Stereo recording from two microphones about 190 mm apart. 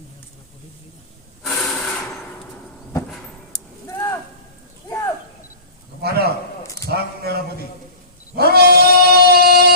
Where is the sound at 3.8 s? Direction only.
15° left (ahead or behind).